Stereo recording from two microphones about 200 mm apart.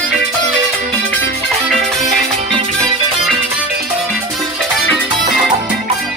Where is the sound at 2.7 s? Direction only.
Centre (ahead or behind).